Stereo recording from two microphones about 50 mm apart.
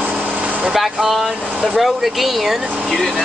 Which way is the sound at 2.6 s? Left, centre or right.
Centre.